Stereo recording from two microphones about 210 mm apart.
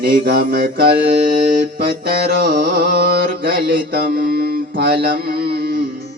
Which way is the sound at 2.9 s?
45° right (ahead or behind).